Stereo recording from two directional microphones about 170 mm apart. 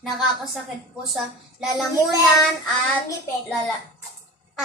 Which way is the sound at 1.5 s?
Centre (ahead or behind).